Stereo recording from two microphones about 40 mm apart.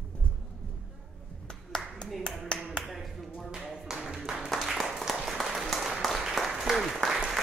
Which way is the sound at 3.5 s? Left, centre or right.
Centre.